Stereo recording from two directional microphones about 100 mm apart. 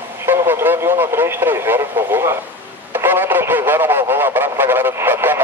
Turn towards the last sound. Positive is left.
turn(degrees=-20)  # may be behind; listen again after turning